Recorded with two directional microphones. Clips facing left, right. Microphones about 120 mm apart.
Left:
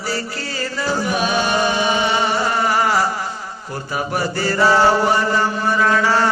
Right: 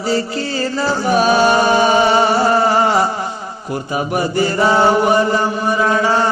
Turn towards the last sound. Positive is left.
turn(degrees=-20)  # may be behind; listen again after turning